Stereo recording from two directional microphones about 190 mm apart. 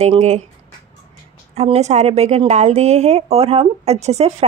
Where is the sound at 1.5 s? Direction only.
35° right (ahead or behind).